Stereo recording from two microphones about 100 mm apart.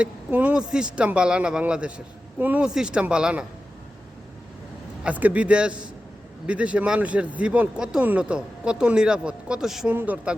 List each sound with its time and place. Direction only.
0.0 s speech: 15° right (ahead or behind)
5.0 s speech: 15° right (ahead or behind)
9.9 s speech: 15° right (ahead or behind)